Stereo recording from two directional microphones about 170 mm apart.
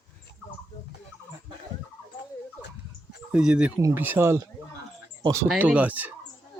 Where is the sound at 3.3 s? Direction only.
5° right (ahead or behind); by 5.4 s 20° right (ahead or behind).